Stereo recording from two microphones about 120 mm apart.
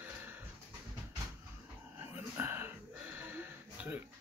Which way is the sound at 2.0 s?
15° right (ahead or behind).